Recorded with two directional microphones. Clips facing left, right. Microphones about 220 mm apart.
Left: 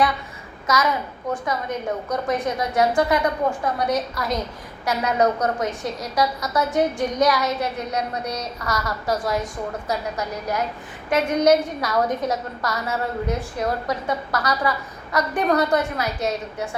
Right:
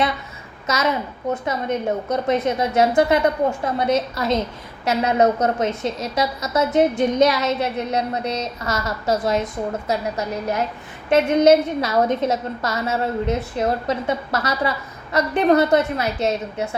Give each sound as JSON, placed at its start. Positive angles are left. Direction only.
{"t": 0.7, "sound": "a woman's voice", "side_deg": -25}
{"t": 2.0, "sound": "a woman's voice", "side_deg": -25}